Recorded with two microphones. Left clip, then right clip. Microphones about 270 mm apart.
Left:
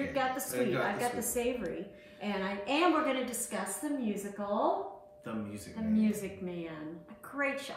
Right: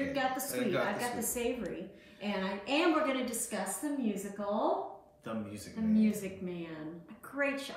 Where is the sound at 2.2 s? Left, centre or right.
Centre.